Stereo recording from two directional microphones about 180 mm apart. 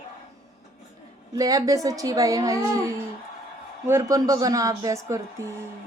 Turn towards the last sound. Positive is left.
turn(degrees=-15)  # may be behind; listen again after turning